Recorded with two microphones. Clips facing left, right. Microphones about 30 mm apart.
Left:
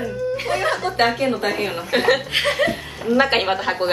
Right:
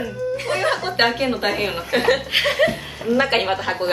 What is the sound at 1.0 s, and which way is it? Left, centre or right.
Speech, centre.